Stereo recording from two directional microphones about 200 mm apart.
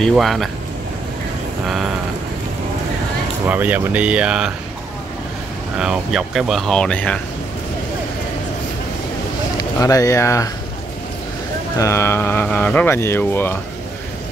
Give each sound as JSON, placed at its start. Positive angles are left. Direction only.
{"t": 0.0, "sound": "speech", "side_deg": 0}
{"t": 3.4, "sound": "speech", "side_deg": -10}
{"t": 5.8, "sound": "speech", "side_deg": -5}
{"t": 9.6, "sound": "speech", "side_deg": 15}
{"t": 11.7, "sound": "speech", "side_deg": 15}